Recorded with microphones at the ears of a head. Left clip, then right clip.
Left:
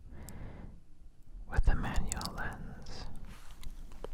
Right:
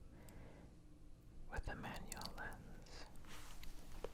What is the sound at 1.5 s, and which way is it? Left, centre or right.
Whispering, left.